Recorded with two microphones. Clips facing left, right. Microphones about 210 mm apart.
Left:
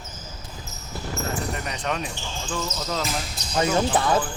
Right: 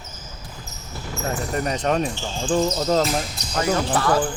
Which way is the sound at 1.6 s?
40° right (ahead or behind).